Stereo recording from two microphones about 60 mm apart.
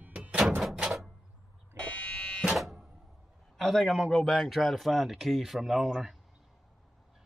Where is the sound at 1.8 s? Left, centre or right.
Left.